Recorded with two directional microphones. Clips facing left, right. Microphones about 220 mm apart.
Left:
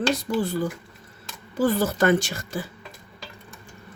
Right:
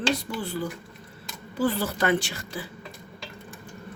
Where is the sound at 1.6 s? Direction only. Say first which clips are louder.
Left 4 dB; 45° left (ahead or behind).